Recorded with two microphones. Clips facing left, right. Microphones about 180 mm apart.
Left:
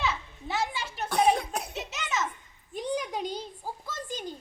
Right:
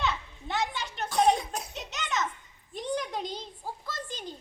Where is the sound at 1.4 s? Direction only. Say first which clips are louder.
Left 3 dB; 60° left (ahead or behind).